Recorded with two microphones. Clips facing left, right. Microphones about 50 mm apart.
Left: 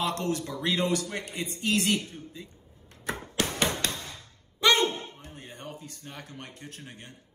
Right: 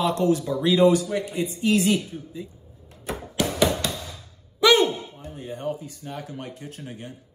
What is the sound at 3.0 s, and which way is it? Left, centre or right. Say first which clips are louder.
Chopping: right 4 dB; left.